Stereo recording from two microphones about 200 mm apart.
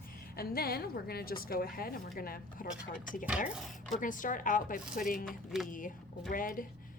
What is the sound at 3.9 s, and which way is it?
Speech, 40° left (ahead or behind).